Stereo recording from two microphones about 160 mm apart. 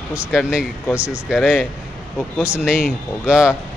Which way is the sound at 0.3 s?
5° right (ahead or behind).